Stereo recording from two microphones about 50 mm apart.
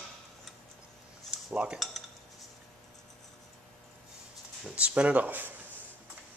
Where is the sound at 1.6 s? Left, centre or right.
Right.